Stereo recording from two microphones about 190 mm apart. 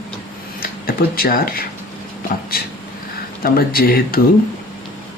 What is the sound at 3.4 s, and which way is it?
Speech, 50° left (ahead or behind).